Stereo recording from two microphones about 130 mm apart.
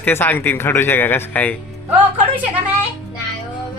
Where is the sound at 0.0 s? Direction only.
15° left (ahead or behind).